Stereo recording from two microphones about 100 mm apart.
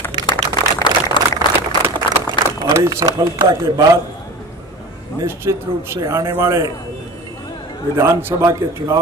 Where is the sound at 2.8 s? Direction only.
40° right (ahead or behind).